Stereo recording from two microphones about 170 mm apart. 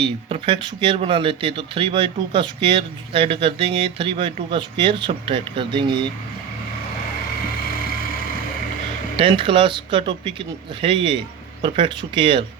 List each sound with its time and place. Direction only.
0.0 s speech: 30° right (ahead or behind)
7.7 s vehicle: 60° left (ahead or behind)
9.1 s speech: 30° right (ahead or behind)